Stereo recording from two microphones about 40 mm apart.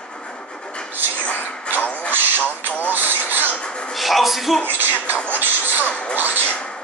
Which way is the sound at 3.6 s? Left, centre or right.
Left.